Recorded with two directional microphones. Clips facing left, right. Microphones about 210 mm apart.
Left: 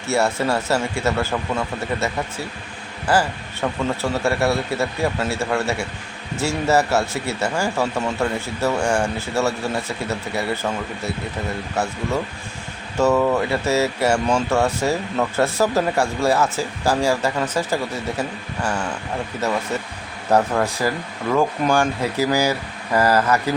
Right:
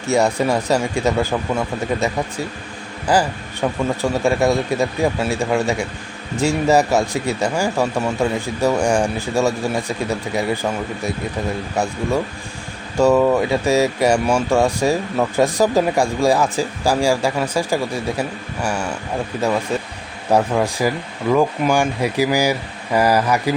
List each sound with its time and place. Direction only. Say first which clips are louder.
0.0 s speech: right 3 dB; 15° right (ahead or behind)
3.1 s speech: right 2 dB; 15° right (ahead or behind)
13.0 s speech: right 3 dB; 15° right (ahead or behind)
20.3 s speech: right 2 dB; 10° right (ahead or behind)